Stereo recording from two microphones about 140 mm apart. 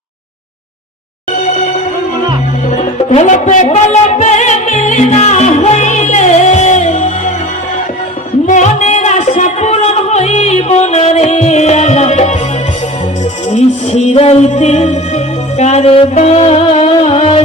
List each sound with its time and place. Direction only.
2.7 s music: 55° left (ahead or behind)
8.4 s music: 60° left (ahead or behind)
13.5 s music: 50° left (ahead or behind)